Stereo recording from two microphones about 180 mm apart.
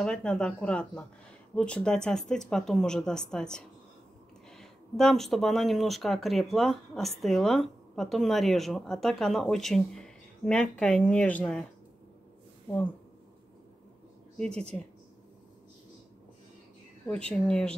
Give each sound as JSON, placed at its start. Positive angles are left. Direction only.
{"t": 0.0, "sound": "speech", "side_deg": 5}
{"t": 14.3, "sound": "speech", "side_deg": 5}
{"t": 17.1, "sound": "speech", "side_deg": 5}